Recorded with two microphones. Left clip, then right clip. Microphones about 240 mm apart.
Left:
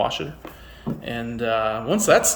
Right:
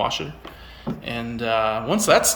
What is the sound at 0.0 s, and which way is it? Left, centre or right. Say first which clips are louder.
Speech: even; centre.